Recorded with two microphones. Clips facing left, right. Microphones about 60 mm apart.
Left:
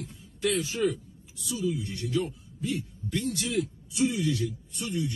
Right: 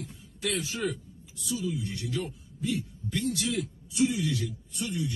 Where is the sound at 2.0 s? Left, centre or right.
Left.